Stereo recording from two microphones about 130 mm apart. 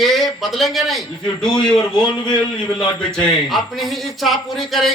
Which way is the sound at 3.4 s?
Centre (ahead or behind).